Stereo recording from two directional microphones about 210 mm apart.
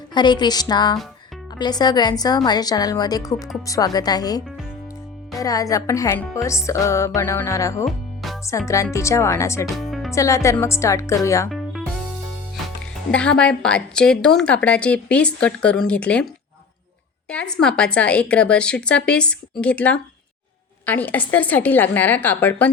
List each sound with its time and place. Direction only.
0.1 s a woman's voice: 20° left (ahead or behind)
7.9 s music: centre (ahead or behind)
8.4 s speech: 15° left (ahead or behind)
9.7 s music: centre (ahead or behind)
10.1 s speech: 15° left (ahead or behind)
13.1 s a woman's voice: 5° left (ahead or behind)
17.2 s a woman's voice: 5° left (ahead or behind)